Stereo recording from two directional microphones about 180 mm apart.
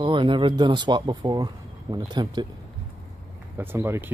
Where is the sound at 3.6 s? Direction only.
15° right (ahead or behind).